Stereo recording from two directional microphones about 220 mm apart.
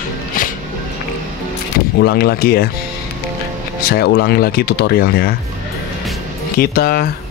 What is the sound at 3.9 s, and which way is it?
Speech, 45° left (ahead or behind).